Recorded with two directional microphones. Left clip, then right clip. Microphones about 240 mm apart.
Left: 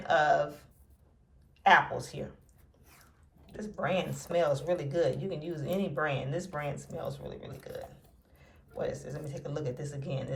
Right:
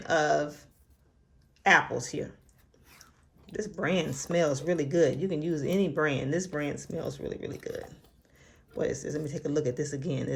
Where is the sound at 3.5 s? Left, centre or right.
Right.